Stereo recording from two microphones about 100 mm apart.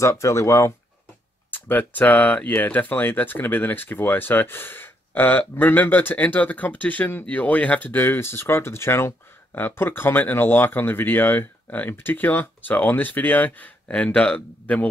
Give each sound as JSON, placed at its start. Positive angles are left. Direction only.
{"t": 0.0, "sound": "speech", "side_deg": 30}
{"t": 1.5, "sound": "speech", "side_deg": 20}